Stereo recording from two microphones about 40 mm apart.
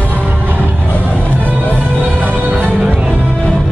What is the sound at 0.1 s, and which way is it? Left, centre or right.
Music, right.